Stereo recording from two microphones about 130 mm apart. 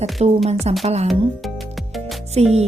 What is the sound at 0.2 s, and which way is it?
Speech, 55° right (ahead or behind).